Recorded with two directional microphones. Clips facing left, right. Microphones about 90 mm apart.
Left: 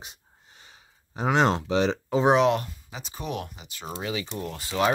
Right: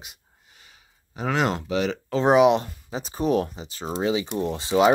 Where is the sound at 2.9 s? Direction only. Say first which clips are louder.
Right 12 dB; 35° right (ahead or behind); by 4.9 s 20° right (ahead or behind).